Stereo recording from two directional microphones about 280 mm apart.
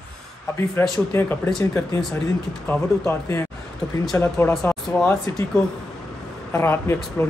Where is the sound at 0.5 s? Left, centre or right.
Centre.